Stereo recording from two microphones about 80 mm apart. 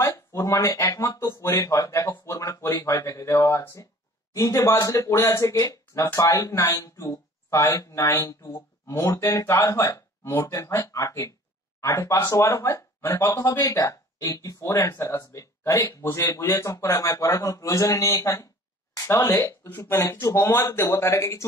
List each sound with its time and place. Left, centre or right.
0.0 s speech: left
1.6 s speech: left
8.5 s speech: left